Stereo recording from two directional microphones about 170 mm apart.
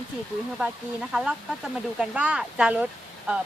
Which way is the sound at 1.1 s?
5° right (ahead or behind).